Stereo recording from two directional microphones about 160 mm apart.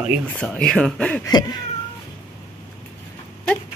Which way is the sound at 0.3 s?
5° left (ahead or behind).